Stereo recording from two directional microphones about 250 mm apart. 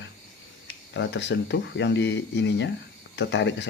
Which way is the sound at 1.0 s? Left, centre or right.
Left.